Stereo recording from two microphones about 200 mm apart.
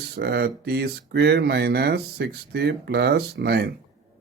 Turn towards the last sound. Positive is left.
turn(degrees=-55)  # may be behind; listen again after turning